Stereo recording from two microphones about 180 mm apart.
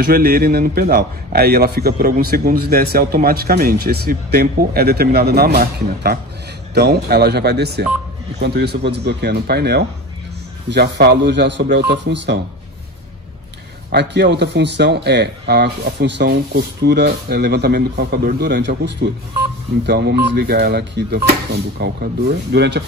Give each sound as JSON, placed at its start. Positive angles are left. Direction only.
{"t": 0.0, "sound": "a man's voice", "side_deg": -55}
{"t": 13.9, "sound": "a man's voice", "side_deg": -70}